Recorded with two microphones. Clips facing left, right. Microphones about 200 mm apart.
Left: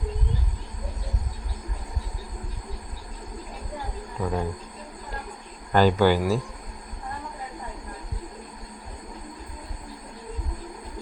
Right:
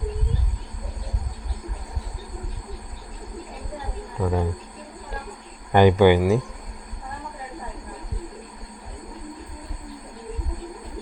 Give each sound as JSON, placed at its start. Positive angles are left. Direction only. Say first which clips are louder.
{"t": 4.2, "sound": "speech", "louder": "right 3 dB", "side_deg": -5}
{"t": 5.7, "sound": "speech", "louder": "right 4 dB", "side_deg": -15}